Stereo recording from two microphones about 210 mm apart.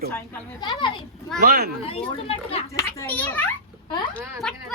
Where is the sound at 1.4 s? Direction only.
45° right (ahead or behind).